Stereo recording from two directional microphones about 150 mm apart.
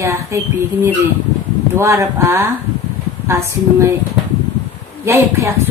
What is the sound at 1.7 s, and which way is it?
A woman's voice, 20° right (ahead or behind).